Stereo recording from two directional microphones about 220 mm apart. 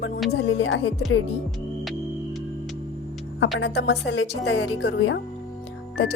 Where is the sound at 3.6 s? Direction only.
50° left (ahead or behind).